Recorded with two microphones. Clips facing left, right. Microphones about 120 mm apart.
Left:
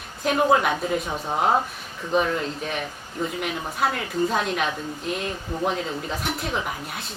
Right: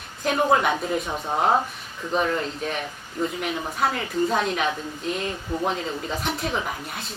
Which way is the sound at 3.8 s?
Centre (ahead or behind).